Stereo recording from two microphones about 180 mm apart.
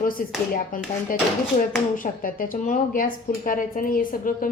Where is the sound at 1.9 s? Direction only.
50° left (ahead or behind).